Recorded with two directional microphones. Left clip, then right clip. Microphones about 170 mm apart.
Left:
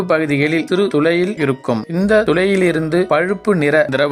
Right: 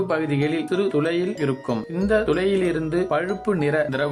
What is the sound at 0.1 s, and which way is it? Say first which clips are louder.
Speech: left 8 dB; 35° left (ahead or behind).